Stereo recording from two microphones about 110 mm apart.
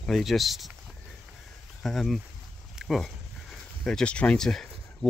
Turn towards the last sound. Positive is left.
turn(degrees=5)  # may be behind; listen again after turning